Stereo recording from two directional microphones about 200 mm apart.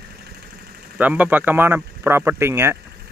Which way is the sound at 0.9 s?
10° right (ahead or behind).